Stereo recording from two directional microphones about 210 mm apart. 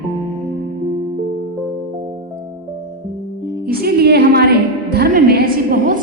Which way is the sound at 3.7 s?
45° right (ahead or behind).